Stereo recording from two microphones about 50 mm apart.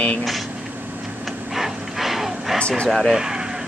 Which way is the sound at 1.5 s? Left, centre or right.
Centre.